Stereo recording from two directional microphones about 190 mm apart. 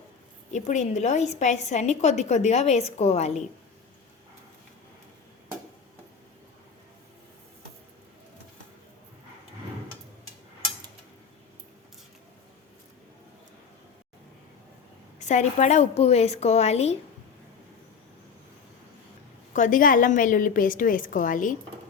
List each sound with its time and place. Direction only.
0.5 s a woman's voice: 40° left (ahead or behind)
15.2 s a woman's voice: 40° left (ahead or behind)
19.5 s a woman's voice: 45° left (ahead or behind)